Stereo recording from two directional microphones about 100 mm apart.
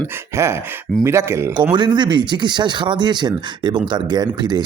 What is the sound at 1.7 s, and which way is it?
Speech, 50° right (ahead or behind).